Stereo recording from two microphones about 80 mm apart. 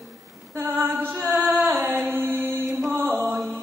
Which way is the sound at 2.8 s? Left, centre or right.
Right.